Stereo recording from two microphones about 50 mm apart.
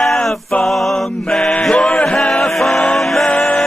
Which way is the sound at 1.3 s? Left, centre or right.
Centre.